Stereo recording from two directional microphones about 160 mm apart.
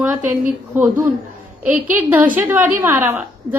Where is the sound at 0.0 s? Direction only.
10° right (ahead or behind).